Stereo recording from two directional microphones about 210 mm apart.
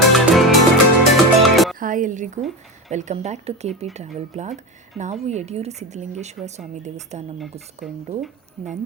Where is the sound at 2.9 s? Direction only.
35° right (ahead or behind).